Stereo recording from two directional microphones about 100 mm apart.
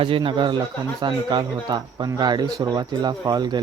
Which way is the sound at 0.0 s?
60° right (ahead or behind).